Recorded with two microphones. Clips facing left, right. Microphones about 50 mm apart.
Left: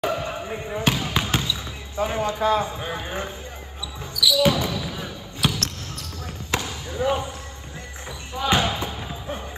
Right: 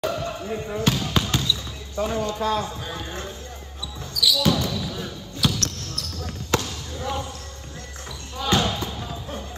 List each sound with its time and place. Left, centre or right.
0.0 s basketball bounce: left
8.4 s basketball bounce: left